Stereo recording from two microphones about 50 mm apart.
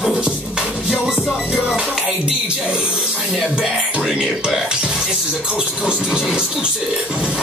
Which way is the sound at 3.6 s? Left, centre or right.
Centre.